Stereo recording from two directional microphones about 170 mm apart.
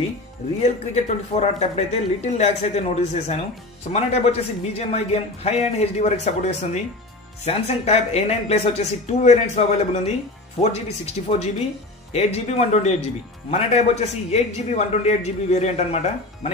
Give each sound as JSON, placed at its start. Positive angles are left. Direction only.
{"t": 0.6, "sound": "speech", "side_deg": 40}
{"t": 11.2, "sound": "speech", "side_deg": 45}